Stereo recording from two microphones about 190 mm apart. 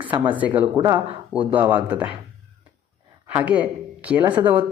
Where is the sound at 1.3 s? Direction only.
10° right (ahead or behind).